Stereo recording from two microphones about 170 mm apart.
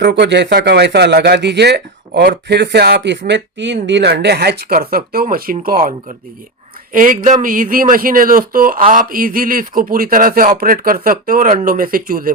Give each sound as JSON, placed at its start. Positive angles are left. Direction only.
{"t": 0.0, "sound": "speech", "side_deg": -80}